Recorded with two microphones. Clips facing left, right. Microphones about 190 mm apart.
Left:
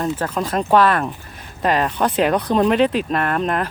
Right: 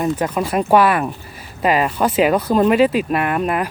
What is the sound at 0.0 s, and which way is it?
Speech, 10° right (ahead or behind).